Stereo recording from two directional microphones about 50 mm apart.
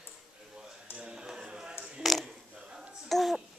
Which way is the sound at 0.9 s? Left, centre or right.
Centre.